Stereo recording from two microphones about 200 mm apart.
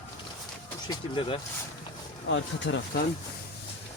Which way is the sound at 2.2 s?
70° left (ahead or behind).